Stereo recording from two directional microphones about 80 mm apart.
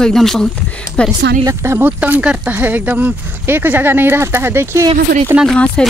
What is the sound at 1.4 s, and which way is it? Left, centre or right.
Speech, right.